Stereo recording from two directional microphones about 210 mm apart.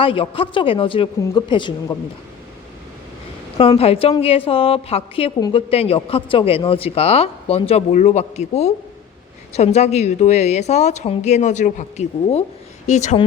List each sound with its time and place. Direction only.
0.0 s a woman's voice: 25° left (ahead or behind)
3.6 s a woman's voice: 25° left (ahead or behind)